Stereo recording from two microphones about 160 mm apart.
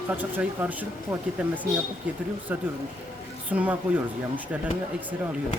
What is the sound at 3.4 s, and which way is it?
Speech, 10° right (ahead or behind).